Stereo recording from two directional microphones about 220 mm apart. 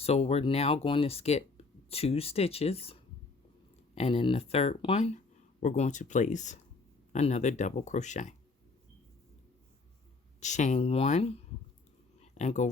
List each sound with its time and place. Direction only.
0.0 s speech: 25° left (ahead or behind)
10.4 s speech: 30° left (ahead or behind)
12.2 s a sound: 30° left (ahead or behind)